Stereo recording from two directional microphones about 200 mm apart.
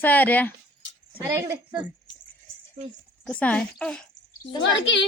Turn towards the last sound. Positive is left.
turn(degrees=60)  # may be behind; listen again after turning